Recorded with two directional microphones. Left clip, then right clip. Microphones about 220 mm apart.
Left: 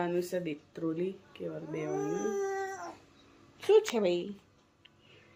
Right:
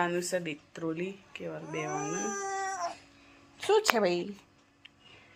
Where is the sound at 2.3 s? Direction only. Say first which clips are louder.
Left 1 dB; 10° left (ahead or behind).